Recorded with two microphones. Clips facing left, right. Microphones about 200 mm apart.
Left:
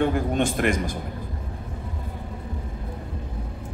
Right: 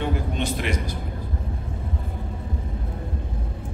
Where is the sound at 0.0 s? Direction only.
50° left (ahead or behind).